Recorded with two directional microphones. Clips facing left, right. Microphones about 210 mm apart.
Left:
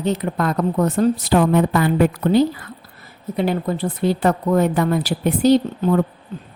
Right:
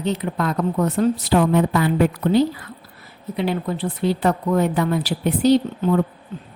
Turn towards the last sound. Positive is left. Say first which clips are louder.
# left 1 dB
turn(degrees=45)  # may be behind; listen again after turning